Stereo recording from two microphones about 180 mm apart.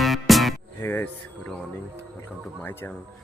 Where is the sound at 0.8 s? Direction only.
10° left (ahead or behind).